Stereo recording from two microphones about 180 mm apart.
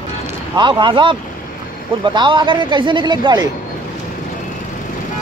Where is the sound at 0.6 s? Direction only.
25° right (ahead or behind).